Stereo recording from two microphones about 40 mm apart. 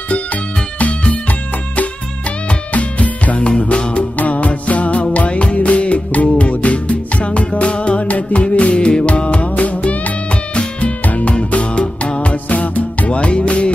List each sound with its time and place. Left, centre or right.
0.1 s music: left
2.7 s music: left